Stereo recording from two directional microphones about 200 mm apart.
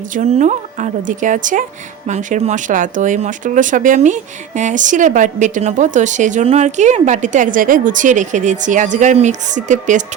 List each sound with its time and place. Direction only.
0.1 s speech: 35° right (ahead or behind)